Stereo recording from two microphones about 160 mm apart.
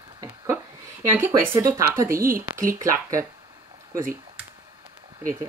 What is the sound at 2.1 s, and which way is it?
Speech, 60° right (ahead or behind).